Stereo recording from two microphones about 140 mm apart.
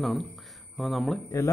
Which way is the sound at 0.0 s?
Centre (ahead or behind).